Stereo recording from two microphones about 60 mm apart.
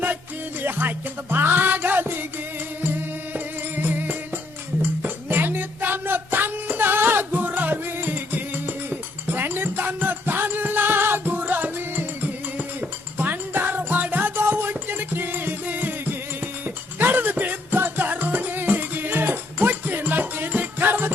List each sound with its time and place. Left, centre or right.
0.6 s music: right
3.3 s music: right